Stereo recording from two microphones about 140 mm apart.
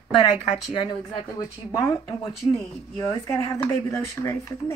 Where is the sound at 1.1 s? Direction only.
40° left (ahead or behind).